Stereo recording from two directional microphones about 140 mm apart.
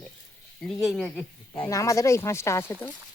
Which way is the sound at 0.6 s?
Centre (ahead or behind).